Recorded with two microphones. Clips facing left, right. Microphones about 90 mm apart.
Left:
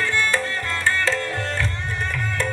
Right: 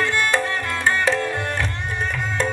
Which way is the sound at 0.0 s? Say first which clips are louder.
Right 2 dB; 15° right (ahead or behind).